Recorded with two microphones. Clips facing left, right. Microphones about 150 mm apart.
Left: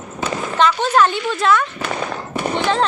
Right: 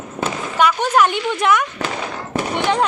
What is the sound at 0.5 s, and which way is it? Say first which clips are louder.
Speech: even; 10° right (ahead or behind).